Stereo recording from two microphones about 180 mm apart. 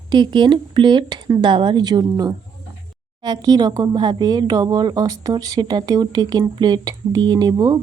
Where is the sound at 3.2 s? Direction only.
20° right (ahead or behind).